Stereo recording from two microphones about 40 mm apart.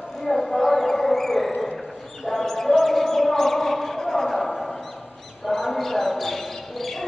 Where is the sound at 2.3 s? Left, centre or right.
Centre.